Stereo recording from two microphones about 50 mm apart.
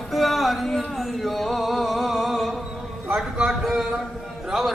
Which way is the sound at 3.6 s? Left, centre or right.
Centre.